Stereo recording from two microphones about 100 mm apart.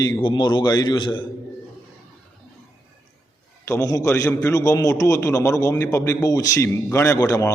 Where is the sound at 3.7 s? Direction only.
35° left (ahead or behind).